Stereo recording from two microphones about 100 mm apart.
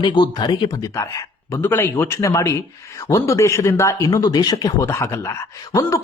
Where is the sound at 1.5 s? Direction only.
20° left (ahead or behind).